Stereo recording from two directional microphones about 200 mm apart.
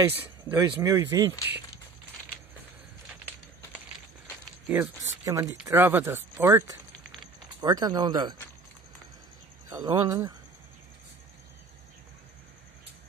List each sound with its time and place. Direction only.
0.1 s speech: 10° right (ahead or behind)
4.6 s speech: 10° right (ahead or behind)
9.7 s speech: 20° right (ahead or behind)